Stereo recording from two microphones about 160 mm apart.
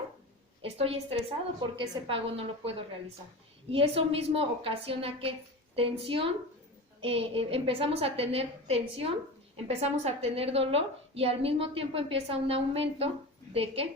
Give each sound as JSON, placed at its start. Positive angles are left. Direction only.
{"t": 0.6, "sound": "a woman's voice", "side_deg": -35}